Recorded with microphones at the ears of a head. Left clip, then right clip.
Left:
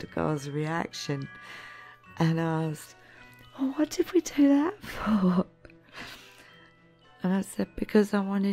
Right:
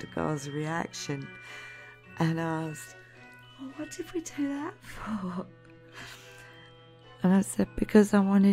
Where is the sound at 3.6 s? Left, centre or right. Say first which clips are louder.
Left 12 dB; left.